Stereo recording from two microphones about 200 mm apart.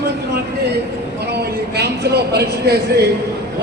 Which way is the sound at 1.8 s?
55° right (ahead or behind).